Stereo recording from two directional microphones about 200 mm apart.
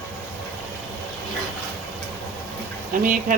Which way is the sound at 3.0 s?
45° right (ahead or behind).